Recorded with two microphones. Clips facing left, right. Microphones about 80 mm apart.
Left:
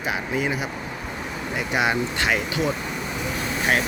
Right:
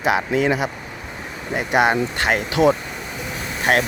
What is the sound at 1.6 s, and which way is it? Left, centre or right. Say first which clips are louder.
Speech: right 6 dB; right.